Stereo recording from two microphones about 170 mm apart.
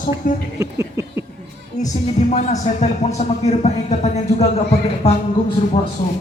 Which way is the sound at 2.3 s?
45° left (ahead or behind).